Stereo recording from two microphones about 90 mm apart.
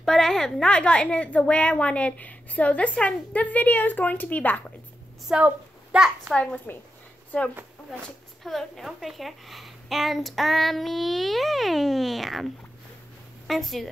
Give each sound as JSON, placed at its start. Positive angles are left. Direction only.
{"t": 0.0, "sound": "a woman's voice", "side_deg": 5}
{"t": 5.3, "sound": "a child's voice", "side_deg": -10}
{"t": 6.3, "sound": "a woman's voice", "side_deg": 10}
{"t": 8.5, "sound": "a woman's voice", "side_deg": 0}
{"t": 13.5, "sound": "a woman's voice", "side_deg": 0}